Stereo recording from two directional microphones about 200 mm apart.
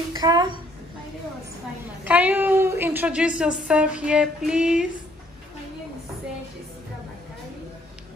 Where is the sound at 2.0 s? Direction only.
5° right (ahead or behind).